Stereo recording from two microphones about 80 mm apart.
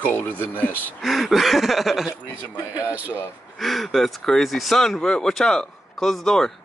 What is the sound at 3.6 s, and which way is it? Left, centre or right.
Speech, centre.